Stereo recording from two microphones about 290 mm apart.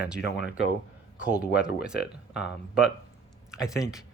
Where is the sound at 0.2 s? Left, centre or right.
Left.